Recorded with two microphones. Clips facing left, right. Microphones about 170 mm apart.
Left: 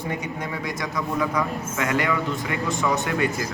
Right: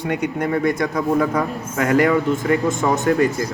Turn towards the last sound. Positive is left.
turn(degrees=-40)  # may be behind; listen again after turning